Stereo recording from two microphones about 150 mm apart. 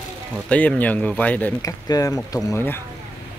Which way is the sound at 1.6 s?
25° left (ahead or behind).